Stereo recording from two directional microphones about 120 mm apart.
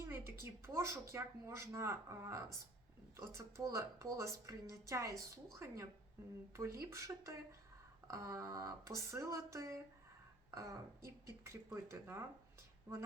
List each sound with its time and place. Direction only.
0.0 s a woman's voice: 20° right (ahead or behind)